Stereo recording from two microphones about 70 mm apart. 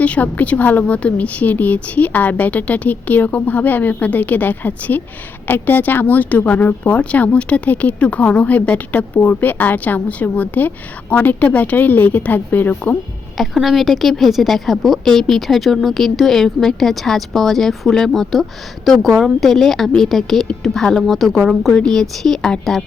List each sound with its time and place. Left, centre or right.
0.0 s speech: left
13.3 s a woman's voice: centre